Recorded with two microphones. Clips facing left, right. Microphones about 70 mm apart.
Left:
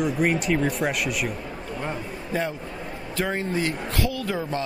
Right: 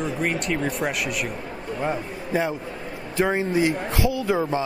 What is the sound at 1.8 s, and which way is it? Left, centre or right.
A man's voice, centre.